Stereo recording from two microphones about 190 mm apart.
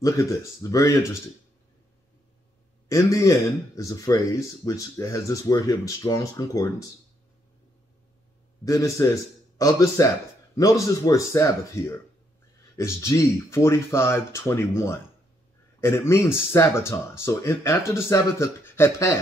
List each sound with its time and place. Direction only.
0.0 s speech: 15° left (ahead or behind)
2.9 s speech: 15° left (ahead or behind)
8.6 s speech: 15° left (ahead or behind)